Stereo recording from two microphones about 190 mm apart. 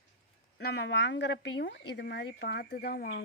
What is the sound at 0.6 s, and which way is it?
Speech, 60° left (ahead or behind).